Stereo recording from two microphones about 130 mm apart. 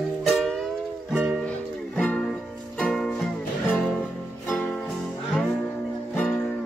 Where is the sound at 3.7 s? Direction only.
15° left (ahead or behind).